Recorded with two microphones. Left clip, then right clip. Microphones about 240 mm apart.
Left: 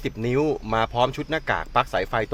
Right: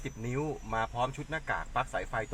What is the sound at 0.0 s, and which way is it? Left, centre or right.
Speech, left.